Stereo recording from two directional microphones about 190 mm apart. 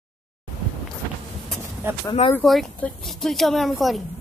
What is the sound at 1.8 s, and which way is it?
Speech, 15° right (ahead or behind).